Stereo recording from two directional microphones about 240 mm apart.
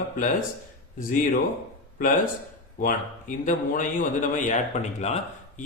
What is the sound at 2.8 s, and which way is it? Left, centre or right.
A man's voice, left.